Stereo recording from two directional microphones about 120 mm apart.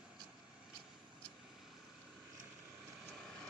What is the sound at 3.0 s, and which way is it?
Vehicle, centre (ahead or behind).